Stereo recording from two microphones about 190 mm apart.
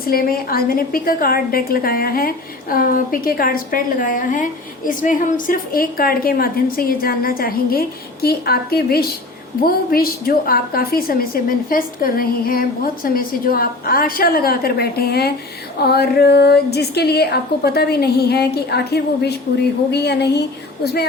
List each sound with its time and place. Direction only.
0.0 s a woman's voice: 50° left (ahead or behind)